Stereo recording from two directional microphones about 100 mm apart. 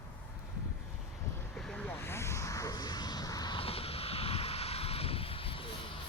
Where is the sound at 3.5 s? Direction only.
70° left (ahead or behind).